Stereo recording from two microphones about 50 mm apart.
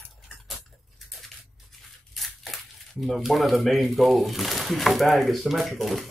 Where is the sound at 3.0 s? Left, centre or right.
Centre.